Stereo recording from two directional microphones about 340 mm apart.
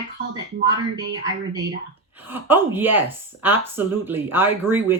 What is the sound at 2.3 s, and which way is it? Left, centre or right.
Speech, centre.